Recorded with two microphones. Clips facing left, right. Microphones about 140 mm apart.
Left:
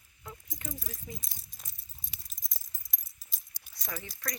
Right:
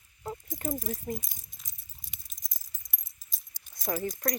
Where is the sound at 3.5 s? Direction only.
45° right (ahead or behind).